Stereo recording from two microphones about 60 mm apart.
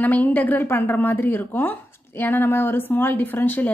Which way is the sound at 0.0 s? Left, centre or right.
Left.